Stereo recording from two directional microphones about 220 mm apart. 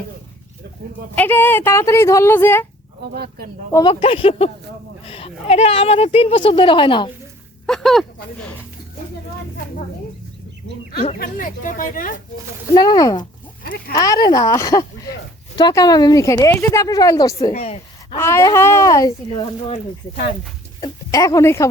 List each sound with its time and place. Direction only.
1.1 s speech: 10° left (ahead or behind)
3.0 s speech: 45° right (ahead or behind)
3.7 s speech: 20° left (ahead or behind)
7.7 s speech: centre (ahead or behind)
11.2 s speech: 40° left (ahead or behind)
12.7 s speech: 20° left (ahead or behind)
17.5 s a woman's voice: 30° left (ahead or behind)
18.2 s speech: 10° left (ahead or behind)
20.8 s speech: 15° left (ahead or behind)